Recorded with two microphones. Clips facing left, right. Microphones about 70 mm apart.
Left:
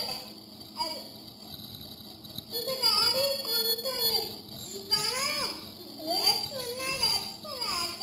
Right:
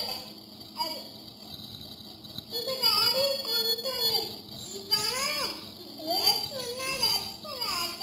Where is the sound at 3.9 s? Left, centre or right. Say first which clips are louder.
Even; left.